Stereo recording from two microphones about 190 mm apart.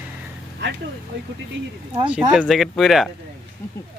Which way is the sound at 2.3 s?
Centre (ahead or behind).